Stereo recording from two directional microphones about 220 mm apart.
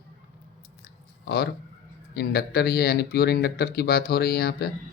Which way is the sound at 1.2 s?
45° left (ahead or behind).